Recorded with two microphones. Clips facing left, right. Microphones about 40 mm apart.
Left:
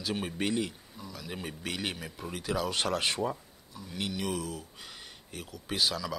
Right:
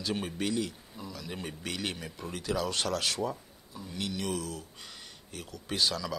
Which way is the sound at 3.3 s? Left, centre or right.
Centre.